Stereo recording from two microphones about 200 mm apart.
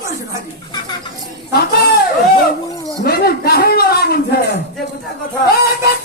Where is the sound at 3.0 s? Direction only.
50° left (ahead or behind).